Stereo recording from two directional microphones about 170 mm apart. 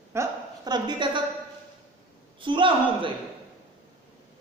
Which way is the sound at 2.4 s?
30° right (ahead or behind).